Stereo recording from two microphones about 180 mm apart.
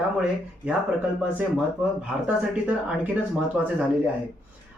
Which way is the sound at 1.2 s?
5° right (ahead or behind).